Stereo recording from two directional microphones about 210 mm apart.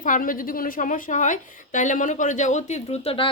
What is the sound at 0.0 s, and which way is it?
A woman's voice, 40° left (ahead or behind).